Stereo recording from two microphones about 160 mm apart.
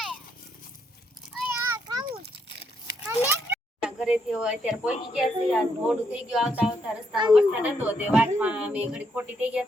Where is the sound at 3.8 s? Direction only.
5° right (ahead or behind).